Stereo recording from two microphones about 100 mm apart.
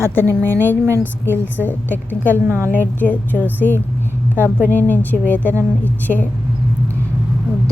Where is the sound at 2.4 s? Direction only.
25° right (ahead or behind).